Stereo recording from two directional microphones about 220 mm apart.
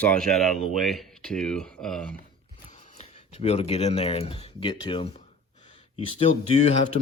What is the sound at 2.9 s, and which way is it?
Speech, 30° left (ahead or behind).